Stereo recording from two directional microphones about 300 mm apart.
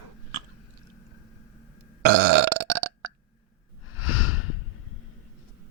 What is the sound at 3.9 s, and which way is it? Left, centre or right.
Snort, left.